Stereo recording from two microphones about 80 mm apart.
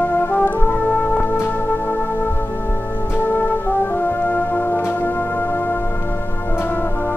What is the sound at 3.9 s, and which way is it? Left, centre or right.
Brass instrument, left.